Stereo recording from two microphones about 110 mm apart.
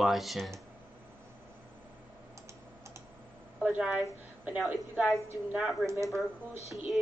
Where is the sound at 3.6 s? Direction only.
5° right (ahead or behind).